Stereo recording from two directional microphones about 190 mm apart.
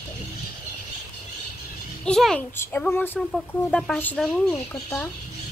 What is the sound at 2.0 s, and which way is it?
A child's voice, 5° left (ahead or behind).